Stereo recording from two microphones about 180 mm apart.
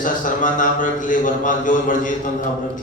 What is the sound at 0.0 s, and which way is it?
Mantra, 45° left (ahead or behind).